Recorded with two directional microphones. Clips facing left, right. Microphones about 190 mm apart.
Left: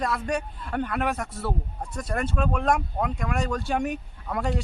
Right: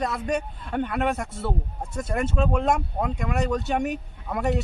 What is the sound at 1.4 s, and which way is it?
Speech, 25° right (ahead or behind).